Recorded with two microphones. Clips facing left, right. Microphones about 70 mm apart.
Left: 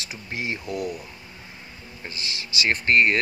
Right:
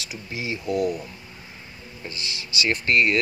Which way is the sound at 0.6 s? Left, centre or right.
Right.